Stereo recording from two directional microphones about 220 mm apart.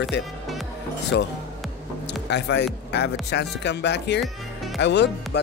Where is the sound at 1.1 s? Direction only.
50° left (ahead or behind).